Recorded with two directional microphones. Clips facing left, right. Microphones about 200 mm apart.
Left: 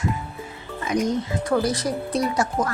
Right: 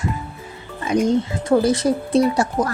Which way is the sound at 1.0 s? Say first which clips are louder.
Right 5 dB; 25° right (ahead or behind).